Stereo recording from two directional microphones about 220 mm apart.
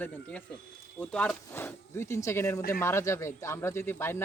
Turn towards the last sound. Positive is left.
turn(degrees=10)  # may be behind; listen again after turning